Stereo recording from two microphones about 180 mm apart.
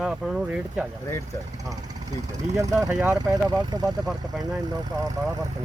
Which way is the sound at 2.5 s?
20° right (ahead or behind).